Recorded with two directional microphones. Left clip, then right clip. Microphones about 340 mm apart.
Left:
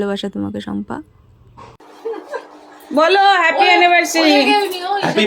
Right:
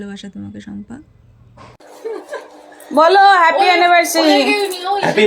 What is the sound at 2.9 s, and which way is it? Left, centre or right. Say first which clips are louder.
Speech: right 3 dB; centre.